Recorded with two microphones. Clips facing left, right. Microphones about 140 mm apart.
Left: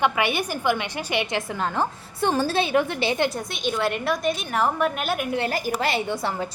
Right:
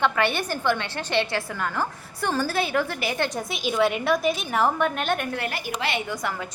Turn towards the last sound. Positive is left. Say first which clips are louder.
# even
turn(degrees=5)  # may be behind; listen again after turning